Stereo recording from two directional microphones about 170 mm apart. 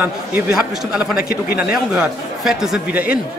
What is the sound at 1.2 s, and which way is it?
Speech, 65° left (ahead or behind).